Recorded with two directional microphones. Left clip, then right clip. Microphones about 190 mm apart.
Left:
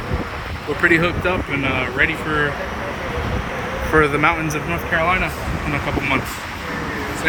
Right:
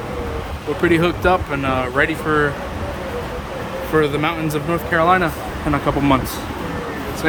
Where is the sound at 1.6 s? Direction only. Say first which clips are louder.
Right 1 dB; 30° right (ahead or behind).